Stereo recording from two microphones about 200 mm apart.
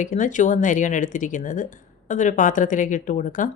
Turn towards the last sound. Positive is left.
turn(degrees=40)  # may be behind; listen again after turning